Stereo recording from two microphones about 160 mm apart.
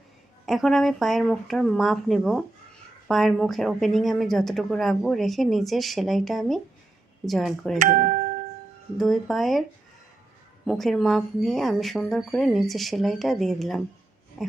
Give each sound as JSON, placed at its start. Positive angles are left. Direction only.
{"t": 0.4, "sound": "a woman's voice", "side_deg": 0}
{"t": 7.8, "sound": "speech", "side_deg": -55}
{"t": 9.0, "sound": "a woman's voice", "side_deg": 0}
{"t": 10.7, "sound": "a woman's voice", "side_deg": 5}
{"t": 14.4, "sound": "a sound", "side_deg": -5}